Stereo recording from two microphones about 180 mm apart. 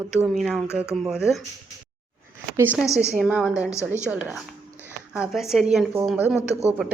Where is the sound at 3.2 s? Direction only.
5° right (ahead or behind).